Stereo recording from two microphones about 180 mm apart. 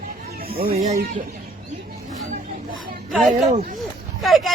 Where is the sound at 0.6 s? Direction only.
55° right (ahead or behind).